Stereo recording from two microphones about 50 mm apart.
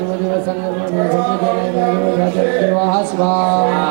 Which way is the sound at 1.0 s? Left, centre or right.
Centre.